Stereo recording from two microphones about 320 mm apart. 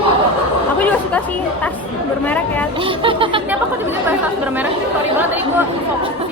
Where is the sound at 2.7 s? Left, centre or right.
Centre.